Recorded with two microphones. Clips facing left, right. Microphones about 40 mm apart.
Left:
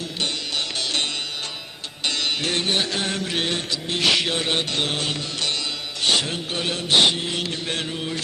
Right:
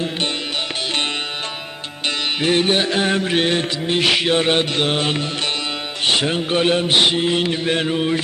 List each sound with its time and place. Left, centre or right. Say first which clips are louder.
2.0 s music: right 5 dB; right
4.0 s music: right 4 dB; centre
6.9 s mantra: left 2 dB; centre
7.2 s music: right 8 dB; right